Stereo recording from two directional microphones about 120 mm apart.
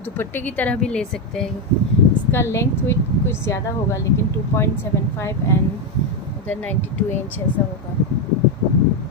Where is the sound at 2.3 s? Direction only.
25° left (ahead or behind).